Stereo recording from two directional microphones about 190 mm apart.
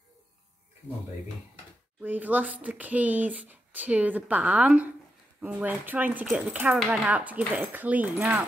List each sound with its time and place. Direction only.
2.0 s speech: 10° right (ahead or behind)